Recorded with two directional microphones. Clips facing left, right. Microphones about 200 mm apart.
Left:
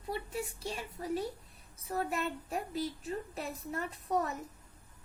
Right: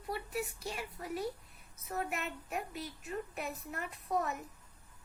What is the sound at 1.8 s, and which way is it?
A woman's voice, 30° left (ahead or behind).